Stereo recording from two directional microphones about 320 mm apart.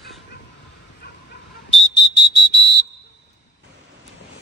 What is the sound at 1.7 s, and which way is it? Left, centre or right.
Whistle, left.